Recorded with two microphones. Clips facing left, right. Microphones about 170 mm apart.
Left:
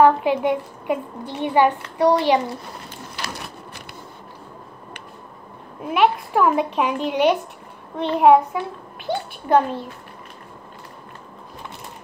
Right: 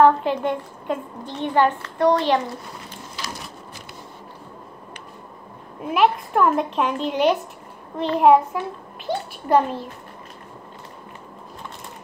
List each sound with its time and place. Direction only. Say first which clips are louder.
0.0 s a woman's voice: left 1 dB; 10° left (ahead or behind)
3.2 s a sound: left 2 dB; 65° left (ahead or behind)
5.8 s speech: even; centre (ahead or behind)